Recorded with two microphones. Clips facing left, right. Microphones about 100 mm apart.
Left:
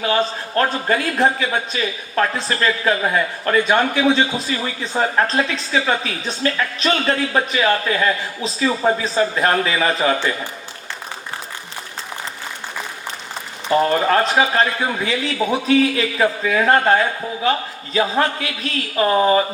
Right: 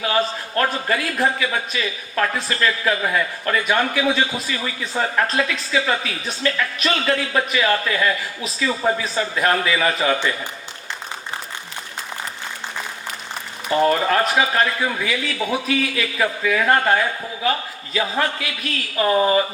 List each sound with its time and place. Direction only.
0.0 s a man's voice: 30° left (ahead or behind)
13.9 s a man's voice: 35° left (ahead or behind)